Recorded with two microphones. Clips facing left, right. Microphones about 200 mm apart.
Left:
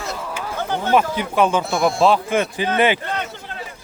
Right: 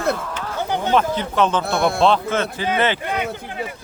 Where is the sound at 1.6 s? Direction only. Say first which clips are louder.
Even; 60° right (ahead or behind).